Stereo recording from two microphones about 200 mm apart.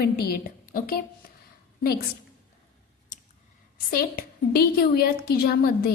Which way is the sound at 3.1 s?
40° left (ahead or behind).